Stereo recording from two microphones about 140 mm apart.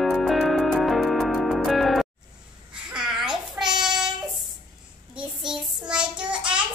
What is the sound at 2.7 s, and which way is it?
Babbling, 5° right (ahead or behind).